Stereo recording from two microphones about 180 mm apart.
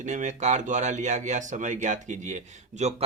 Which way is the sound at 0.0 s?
45° right (ahead or behind).